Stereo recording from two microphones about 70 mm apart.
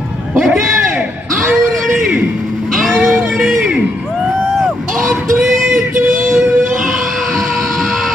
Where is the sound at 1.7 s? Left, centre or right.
Centre.